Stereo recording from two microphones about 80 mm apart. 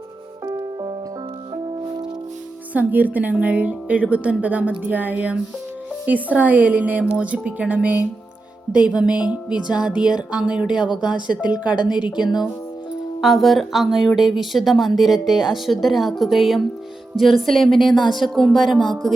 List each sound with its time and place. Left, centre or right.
0.4 s music: right
2.7 s speech: right
13.2 s speech: centre